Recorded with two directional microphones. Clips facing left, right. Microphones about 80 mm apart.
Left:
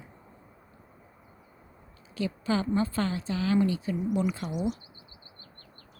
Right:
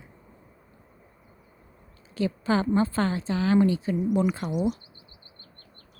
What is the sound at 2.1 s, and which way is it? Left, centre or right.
A woman's voice, right.